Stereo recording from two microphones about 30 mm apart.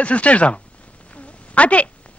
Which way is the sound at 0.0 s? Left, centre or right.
Left.